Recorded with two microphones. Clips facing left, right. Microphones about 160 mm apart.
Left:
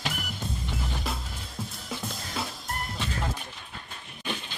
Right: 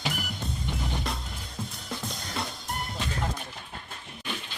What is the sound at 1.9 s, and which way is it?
Drum kit, centre (ahead or behind).